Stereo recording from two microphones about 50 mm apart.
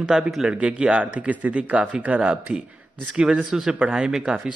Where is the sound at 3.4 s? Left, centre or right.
Centre.